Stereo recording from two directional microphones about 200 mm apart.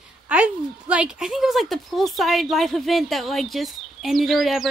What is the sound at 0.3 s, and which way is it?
Speech, 5° right (ahead or behind).